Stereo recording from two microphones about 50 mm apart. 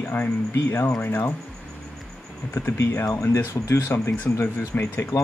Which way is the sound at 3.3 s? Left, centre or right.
Left.